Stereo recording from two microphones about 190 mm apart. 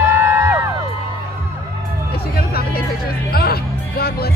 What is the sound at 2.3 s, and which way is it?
Vehicle, 55° left (ahead or behind).